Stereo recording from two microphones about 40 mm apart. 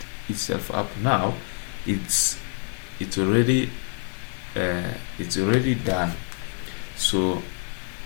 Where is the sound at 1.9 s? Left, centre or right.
Right.